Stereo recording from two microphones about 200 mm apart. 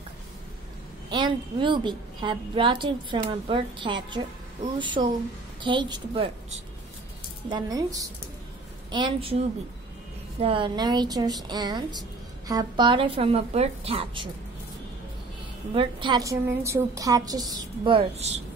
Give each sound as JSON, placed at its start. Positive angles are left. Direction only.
{"t": 1.1, "sound": "a woman's voice", "side_deg": -25}
{"t": 7.4, "sound": "a woman's voice", "side_deg": -20}
{"t": 10.4, "sound": "a woman's voice", "side_deg": -25}
{"t": 15.7, "sound": "a woman's voice", "side_deg": -25}